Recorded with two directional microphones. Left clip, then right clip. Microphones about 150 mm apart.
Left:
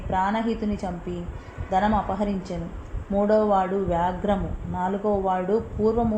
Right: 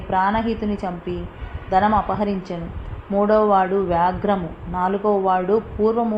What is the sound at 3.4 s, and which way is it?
A woman's voice, centre (ahead or behind).